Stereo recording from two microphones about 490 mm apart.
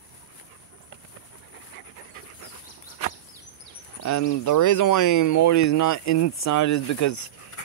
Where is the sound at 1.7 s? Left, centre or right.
Left.